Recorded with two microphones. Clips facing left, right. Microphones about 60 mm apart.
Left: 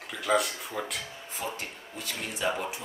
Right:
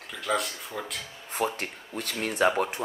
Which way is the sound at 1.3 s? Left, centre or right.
Right.